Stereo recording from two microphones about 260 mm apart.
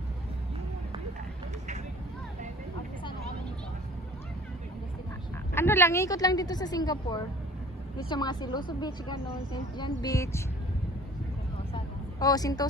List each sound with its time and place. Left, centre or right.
5.5 s a woman's voice: centre
11.7 s vehicle: centre